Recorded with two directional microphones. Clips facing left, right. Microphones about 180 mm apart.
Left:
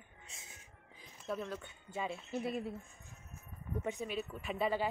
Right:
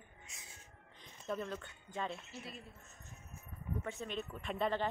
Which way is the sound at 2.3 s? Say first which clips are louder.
Left 12 dB; 60° left (ahead or behind).